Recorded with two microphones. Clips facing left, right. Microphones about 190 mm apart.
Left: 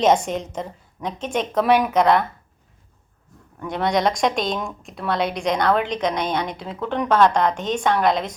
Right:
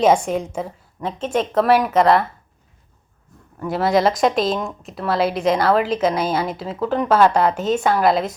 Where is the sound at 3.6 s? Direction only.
5° right (ahead or behind).